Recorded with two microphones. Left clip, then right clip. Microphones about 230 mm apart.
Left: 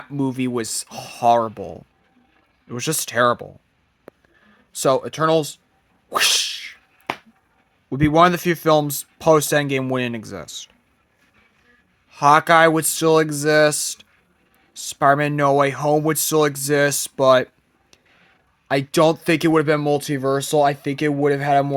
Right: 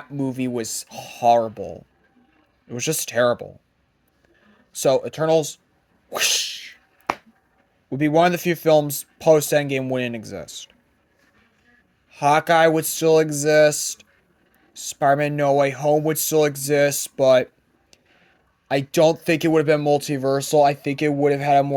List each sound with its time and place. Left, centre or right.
0.2 s speech: left
4.7 s speech: left
6.1 s sneeze: left
7.1 s finger snapping: right
7.9 s speech: centre
12.1 s speech: centre
18.7 s speech: left